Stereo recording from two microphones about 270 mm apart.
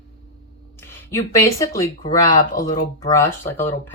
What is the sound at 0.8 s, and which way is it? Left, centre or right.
Speech, centre.